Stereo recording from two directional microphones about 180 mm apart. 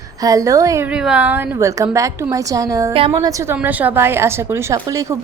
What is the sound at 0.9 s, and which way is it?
A woman's voice, 5° right (ahead or behind).